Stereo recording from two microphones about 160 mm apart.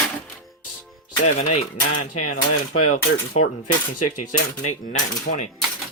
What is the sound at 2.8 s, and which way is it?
Speech, 45° left (ahead or behind).